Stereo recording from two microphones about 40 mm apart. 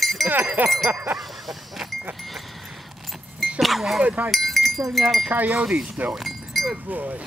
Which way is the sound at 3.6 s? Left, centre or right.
Centre.